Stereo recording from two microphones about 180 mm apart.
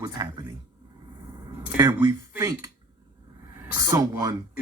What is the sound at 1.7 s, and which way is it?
Speech, 20° right (ahead or behind).